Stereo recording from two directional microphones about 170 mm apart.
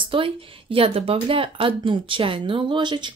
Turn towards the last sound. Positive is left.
turn(degrees=-25)  # may be behind; listen again after turning